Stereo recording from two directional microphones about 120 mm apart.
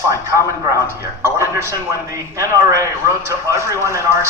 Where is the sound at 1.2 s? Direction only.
20° right (ahead or behind).